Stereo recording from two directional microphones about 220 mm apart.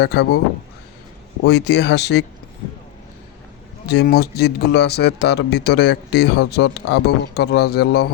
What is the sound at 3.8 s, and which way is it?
Speech, 50° left (ahead or behind).